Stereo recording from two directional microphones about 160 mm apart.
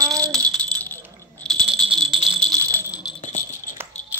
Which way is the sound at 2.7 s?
15° right (ahead or behind).